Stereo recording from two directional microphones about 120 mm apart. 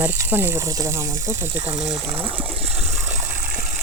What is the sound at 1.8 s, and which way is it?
Speech, 5° right (ahead or behind).